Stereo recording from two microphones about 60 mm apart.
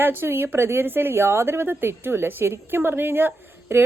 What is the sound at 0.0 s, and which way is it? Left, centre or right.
A woman's voice, right.